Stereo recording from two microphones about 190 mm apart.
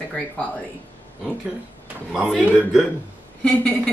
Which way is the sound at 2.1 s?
5° right (ahead or behind).